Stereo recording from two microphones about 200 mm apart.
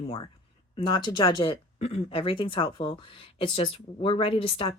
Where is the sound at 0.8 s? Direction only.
20° left (ahead or behind).